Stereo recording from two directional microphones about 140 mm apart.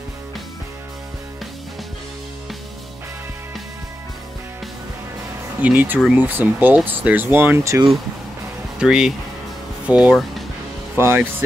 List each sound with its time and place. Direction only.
5.6 s speech: 10° right (ahead or behind)
8.7 s speech: 5° right (ahead or behind)